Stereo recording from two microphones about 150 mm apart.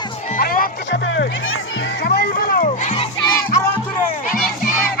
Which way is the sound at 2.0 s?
90° left.